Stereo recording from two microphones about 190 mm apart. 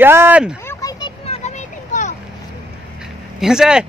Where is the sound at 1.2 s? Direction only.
35° left (ahead or behind).